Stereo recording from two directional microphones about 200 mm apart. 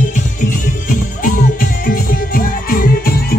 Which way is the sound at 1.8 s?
45° left (ahead or behind).